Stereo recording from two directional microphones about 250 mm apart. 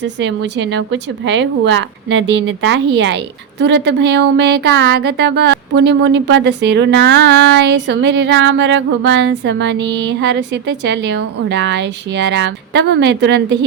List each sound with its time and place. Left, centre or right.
0.0 s speech: right